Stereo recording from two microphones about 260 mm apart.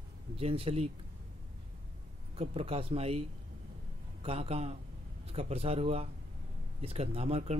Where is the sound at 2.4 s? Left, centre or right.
Right.